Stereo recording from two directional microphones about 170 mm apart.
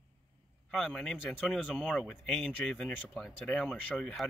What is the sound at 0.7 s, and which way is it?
Speech, centre (ahead or behind).